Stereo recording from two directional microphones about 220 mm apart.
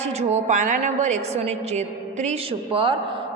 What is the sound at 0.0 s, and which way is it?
A woman's voice, 30° right (ahead or behind).